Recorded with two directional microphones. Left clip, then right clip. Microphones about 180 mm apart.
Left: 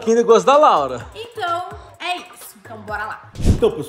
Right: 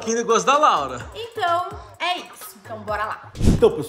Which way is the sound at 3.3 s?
Centre (ahead or behind).